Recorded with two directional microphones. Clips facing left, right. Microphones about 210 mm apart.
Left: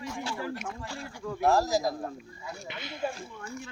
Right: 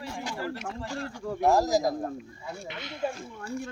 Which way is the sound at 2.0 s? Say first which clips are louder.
Right 3 dB; 30° right (ahead or behind).